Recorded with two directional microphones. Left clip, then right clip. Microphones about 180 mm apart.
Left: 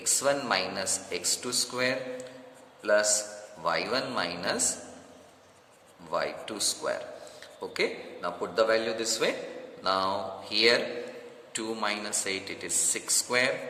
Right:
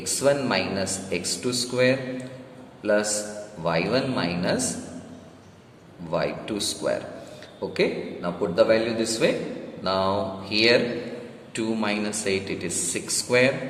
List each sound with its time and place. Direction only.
0.0 s a man's voice: 40° left (ahead or behind)
6.1 s speech: 40° left (ahead or behind)